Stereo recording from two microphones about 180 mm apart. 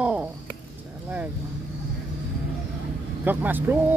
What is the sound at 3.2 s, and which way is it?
Speech, 10° right (ahead or behind).